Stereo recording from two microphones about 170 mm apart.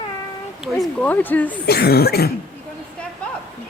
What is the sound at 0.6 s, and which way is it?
Speech, centre (ahead or behind).